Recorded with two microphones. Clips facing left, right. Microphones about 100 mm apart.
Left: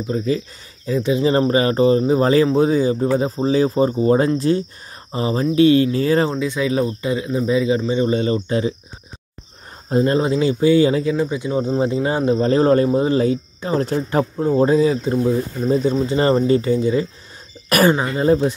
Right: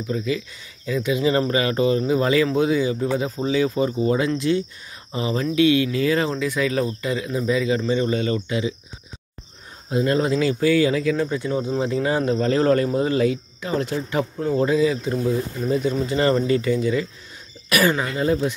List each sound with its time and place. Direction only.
0.1 s speech: 35° left (ahead or behind)
10.0 s speech: 25° left (ahead or behind)
11.1 s speech: 15° left (ahead or behind); by 18.5 s 30° left (ahead or behind)